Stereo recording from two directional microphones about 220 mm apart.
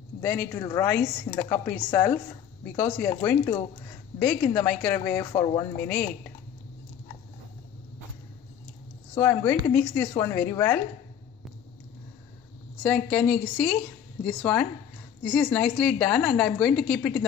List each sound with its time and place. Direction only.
0.2 s a woman's voice: 10° left (ahead or behind)
1.3 s speech: 25° left (ahead or behind)
1.7 s a woman's voice: 10° left (ahead or behind)
9.1 s a woman's voice: 15° left (ahead or behind)
12.8 s a woman's voice: 5° left (ahead or behind)